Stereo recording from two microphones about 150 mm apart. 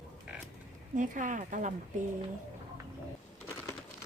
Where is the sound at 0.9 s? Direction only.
60° right (ahead or behind).